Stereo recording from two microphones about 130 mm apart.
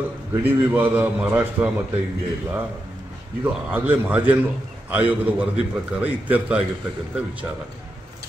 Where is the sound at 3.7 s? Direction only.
15° right (ahead or behind).